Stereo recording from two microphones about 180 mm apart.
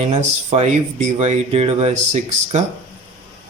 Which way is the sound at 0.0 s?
40° right (ahead or behind).